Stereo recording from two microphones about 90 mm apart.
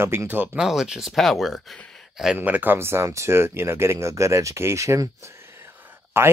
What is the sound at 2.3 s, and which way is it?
Speech, 20° right (ahead or behind).